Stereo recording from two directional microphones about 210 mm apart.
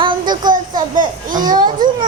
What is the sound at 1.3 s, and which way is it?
Speech, 20° right (ahead or behind).